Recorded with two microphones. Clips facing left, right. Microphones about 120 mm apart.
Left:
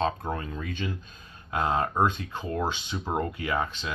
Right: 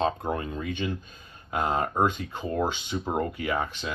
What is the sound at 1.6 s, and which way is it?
Speech, 15° right (ahead or behind).